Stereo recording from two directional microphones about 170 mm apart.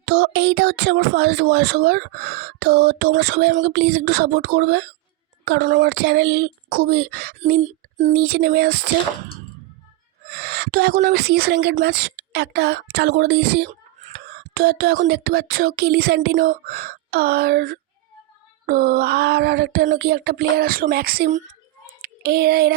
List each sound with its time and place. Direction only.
0.0 s speech: 80° right
7.6 s a sound: 45° right (ahead or behind)
8.1 s speech: 75° right (ahead or behind)
10.2 s a sound: 75° right (ahead or behind)
11.0 s speech: 65° right (ahead or behind)
14.1 s speech: 65° right (ahead or behind)
22.0 s child singing: 70° right (ahead or behind)